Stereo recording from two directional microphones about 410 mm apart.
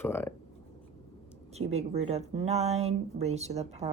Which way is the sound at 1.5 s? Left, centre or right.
Centre.